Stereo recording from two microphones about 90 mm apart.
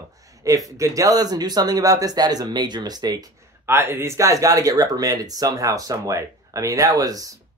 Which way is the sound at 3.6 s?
25° right (ahead or behind).